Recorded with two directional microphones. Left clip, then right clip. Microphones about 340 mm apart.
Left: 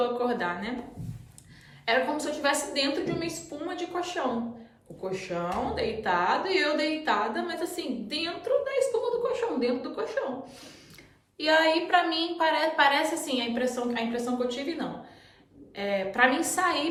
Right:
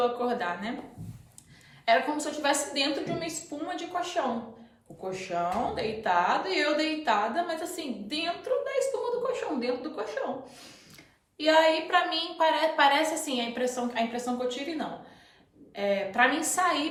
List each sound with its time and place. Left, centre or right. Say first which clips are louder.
0.3 s a woman's voice: left 1 dB; centre
1.8 s a woman's voice: right 1 dB; centre
11.3 s a woman's voice: right 1 dB; centre